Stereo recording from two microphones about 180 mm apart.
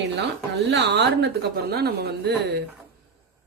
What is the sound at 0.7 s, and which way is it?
A woman's voice, 70° right (ahead or behind).